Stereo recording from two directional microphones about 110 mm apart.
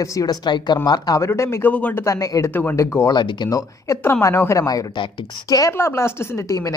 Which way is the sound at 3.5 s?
30° left (ahead or behind).